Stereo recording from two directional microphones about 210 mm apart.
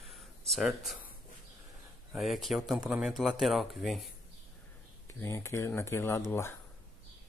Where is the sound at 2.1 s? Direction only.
Centre (ahead or behind).